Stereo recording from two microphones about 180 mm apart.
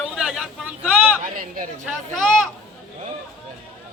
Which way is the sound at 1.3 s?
50° right (ahead or behind).